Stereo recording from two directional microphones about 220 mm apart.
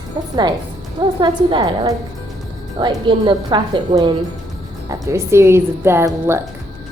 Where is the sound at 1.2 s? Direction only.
20° right (ahead or behind).